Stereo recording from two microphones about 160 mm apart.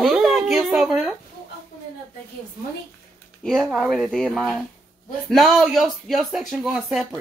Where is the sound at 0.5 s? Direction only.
Centre (ahead or behind).